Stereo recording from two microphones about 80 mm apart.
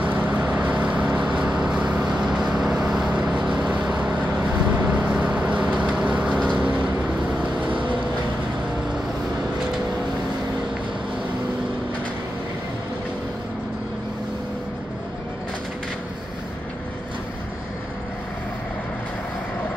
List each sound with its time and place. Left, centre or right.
0.0 s vehicle: centre